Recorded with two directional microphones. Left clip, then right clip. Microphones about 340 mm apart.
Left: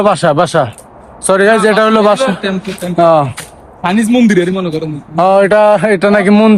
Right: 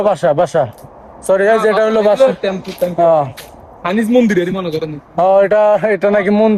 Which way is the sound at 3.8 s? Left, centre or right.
Centre.